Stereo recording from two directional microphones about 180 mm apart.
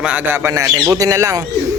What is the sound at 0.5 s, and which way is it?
Speech, 15° right (ahead or behind).